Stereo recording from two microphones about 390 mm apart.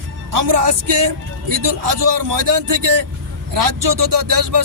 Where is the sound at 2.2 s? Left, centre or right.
Right.